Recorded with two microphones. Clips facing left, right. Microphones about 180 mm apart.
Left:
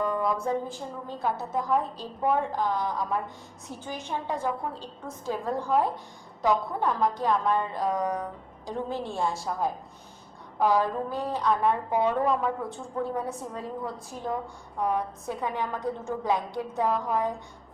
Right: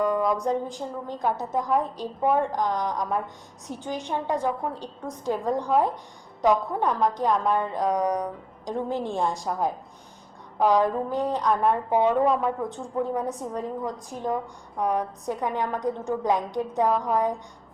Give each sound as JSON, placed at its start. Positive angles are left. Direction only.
{"t": 0.0, "sound": "a woman's voice", "side_deg": -15}